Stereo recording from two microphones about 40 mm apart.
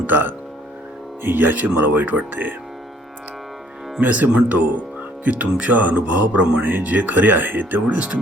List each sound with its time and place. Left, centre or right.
0.1 s speech: right
4.0 s speech: right
6.6 s speech: right
6.8 s speech: right
7.9 s speech: right